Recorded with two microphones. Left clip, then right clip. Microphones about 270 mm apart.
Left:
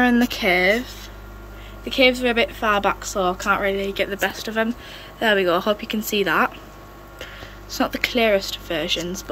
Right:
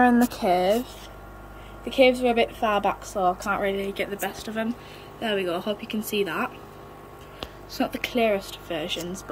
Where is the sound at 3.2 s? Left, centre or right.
Left.